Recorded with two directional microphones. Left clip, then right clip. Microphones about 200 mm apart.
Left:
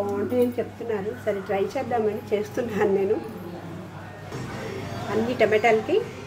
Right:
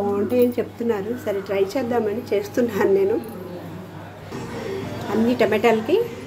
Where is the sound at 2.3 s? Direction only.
20° right (ahead or behind).